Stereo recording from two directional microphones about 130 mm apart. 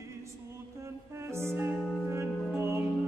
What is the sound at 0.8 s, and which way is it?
Music, 20° right (ahead or behind).